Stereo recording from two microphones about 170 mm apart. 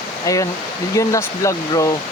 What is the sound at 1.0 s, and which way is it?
Speech, 20° left (ahead or behind).